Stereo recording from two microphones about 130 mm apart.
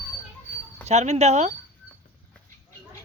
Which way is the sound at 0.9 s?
60° right (ahead or behind).